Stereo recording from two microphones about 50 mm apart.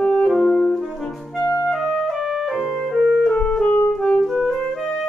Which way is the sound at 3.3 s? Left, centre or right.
Left.